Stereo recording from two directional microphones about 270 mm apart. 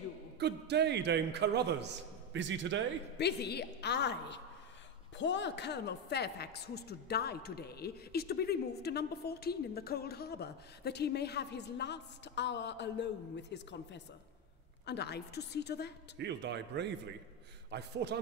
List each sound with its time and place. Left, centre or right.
0.4 s a man's voice: right
3.2 s a woman's voice: left
16.2 s a man's voice: right